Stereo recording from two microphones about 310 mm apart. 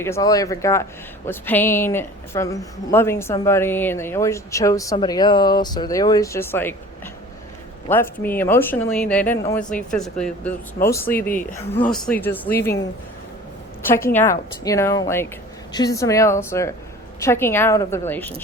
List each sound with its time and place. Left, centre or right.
0.0 s speech: centre
7.9 s speech: centre
12.5 s speech: left
13.9 s speech: centre